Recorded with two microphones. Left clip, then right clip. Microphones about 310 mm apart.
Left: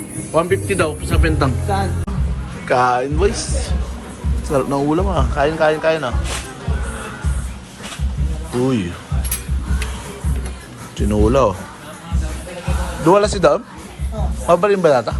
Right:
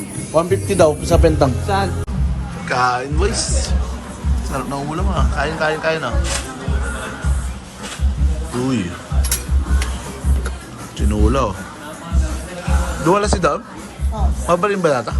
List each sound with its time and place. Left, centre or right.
0.3 s speech: centre
1.6 s a man's voice: centre
8.6 s a man's voice: centre
10.9 s a man's voice: centre
13.1 s a man's voice: centre